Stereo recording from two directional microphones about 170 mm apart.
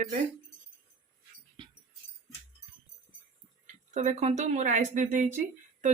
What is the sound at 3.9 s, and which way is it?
Speech, 45° right (ahead or behind).